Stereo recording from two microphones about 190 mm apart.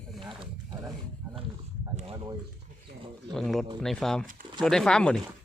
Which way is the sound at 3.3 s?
Centre (ahead or behind).